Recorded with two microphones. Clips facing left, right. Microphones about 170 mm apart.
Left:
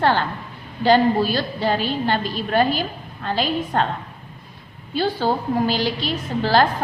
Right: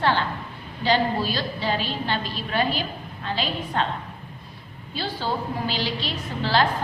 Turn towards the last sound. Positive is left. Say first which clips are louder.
# left 5 dB
turn(degrees=45)  # may be behind; listen again after turning